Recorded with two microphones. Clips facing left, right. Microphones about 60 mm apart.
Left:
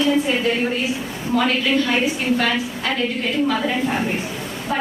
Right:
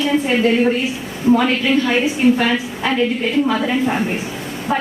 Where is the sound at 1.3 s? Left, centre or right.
Right.